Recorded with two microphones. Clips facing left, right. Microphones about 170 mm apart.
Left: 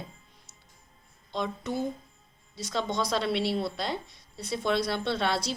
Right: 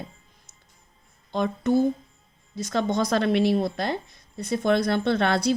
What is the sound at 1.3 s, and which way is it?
Speech, 50° right (ahead or behind).